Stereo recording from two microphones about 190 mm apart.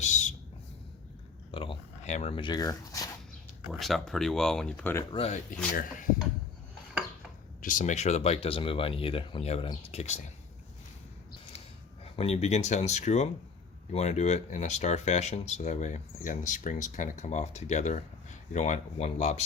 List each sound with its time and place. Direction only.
0.0 s a sound: 40° left (ahead or behind)
1.5 s speech: 30° left (ahead or behind)
3.7 s speech: centre (ahead or behind)
5.1 s speech: 30° left (ahead or behind)
7.6 s speech: 45° left (ahead or behind)
12.0 s speech: 30° left (ahead or behind)